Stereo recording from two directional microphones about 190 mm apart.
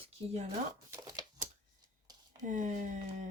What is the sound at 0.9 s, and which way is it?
Speech, 20° right (ahead or behind).